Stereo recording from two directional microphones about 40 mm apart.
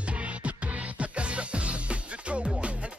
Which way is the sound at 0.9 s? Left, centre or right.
Right.